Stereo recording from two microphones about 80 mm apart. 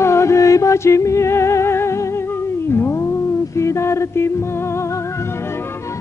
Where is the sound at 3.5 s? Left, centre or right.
Left.